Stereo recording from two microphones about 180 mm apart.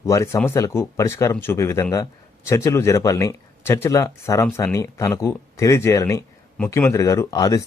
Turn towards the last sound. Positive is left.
turn(degrees=20)  # may be behind; listen again after turning